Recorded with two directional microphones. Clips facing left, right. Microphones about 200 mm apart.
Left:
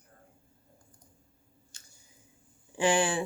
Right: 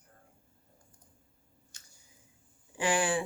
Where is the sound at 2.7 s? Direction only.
25° left (ahead or behind).